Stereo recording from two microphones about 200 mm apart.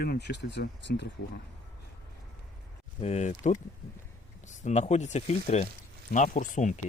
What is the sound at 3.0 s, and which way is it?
Speech, 35° left (ahead or behind).